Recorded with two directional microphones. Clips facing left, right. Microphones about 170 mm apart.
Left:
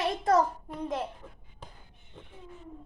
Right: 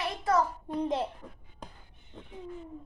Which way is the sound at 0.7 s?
25° right (ahead or behind).